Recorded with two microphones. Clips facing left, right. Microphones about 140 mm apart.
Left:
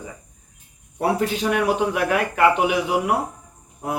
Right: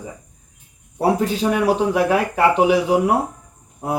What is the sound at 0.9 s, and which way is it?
Speech, 30° right (ahead or behind).